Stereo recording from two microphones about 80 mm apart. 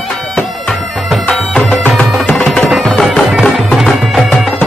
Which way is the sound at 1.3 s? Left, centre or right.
Centre.